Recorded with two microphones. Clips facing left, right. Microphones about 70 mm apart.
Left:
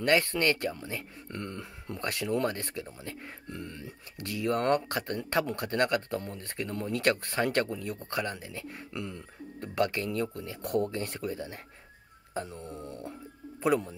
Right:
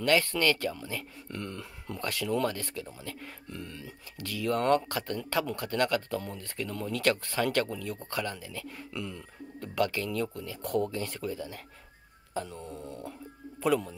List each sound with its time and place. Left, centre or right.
0.0 s speech: left
13.6 s speech: left